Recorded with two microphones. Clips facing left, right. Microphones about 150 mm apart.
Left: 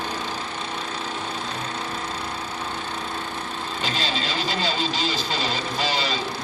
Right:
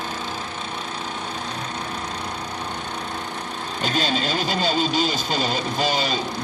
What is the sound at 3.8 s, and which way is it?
Vehicle, 50° right (ahead or behind).